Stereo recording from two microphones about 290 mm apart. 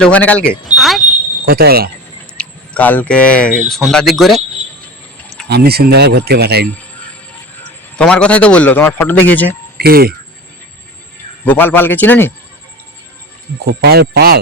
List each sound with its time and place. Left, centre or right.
0.0 s a man's voice: centre
0.7 s smoke detector: centre
1.5 s speech: right
2.4 s speech: centre
5.5 s speech: right
7.9 s a man's voice: centre
9.7 s speech: right
11.4 s a man's voice: centre
13.7 s speech: right